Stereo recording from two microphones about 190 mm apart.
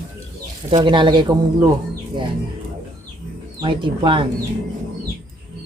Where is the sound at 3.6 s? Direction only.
25° right (ahead or behind).